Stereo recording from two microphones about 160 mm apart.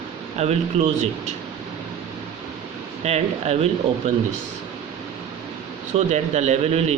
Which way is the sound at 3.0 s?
40° right (ahead or behind).